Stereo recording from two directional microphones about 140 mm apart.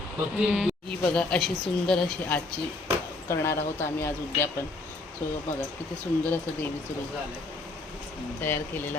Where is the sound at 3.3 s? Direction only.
20° left (ahead or behind).